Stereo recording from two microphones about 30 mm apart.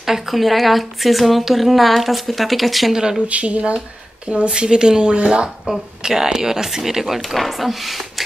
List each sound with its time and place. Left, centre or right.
0.0 s a woman's voice: centre
0.4 s speech: centre
2.9 s speech: right
3.3 s speech: right
4.5 s speech: right
5.7 s speech: centre